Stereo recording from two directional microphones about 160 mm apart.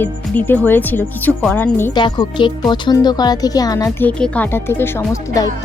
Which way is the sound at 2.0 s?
30° left (ahead or behind).